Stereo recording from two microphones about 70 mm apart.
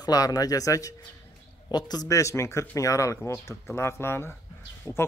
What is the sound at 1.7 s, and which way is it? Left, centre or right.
Speech, left.